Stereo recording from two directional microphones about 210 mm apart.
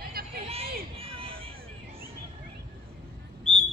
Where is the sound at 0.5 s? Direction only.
25° right (ahead or behind).